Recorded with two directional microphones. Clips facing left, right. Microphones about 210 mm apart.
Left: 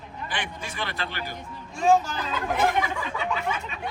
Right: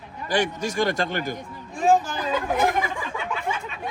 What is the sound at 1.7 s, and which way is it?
Speech, 15° right (ahead or behind).